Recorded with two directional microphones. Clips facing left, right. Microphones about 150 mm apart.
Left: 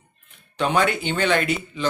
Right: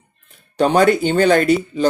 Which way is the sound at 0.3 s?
40° right (ahead or behind).